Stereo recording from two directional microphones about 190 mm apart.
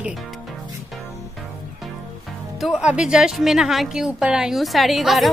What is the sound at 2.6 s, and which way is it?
Speech, centre (ahead or behind).